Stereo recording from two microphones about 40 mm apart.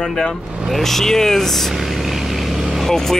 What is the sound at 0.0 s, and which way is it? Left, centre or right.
Speech, centre.